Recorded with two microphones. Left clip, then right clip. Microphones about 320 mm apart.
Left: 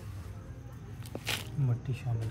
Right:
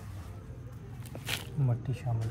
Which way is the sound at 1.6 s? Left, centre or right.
Centre.